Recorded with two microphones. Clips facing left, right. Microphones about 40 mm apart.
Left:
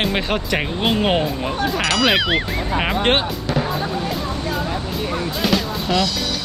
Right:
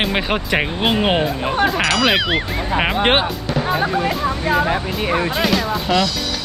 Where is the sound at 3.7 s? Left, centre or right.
Right.